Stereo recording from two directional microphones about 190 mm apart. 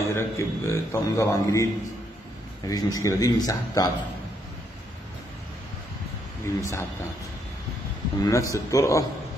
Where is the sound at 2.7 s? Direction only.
15° left (ahead or behind).